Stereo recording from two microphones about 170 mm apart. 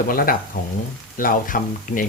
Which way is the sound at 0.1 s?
60° left (ahead or behind).